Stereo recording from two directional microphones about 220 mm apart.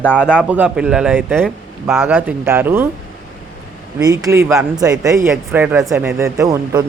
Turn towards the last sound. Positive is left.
turn(degrees=-15)  # may be behind; listen again after turning